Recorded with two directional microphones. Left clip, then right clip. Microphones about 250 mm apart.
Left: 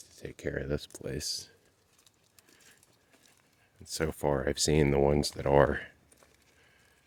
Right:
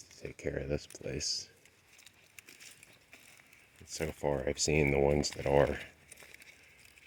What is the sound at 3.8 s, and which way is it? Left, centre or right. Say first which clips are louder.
Speech: left 4 dB; left.